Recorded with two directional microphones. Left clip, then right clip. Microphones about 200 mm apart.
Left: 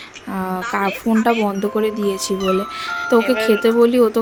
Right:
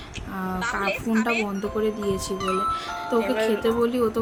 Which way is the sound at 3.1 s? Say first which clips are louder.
Left 8 dB; 45° left (ahead or behind).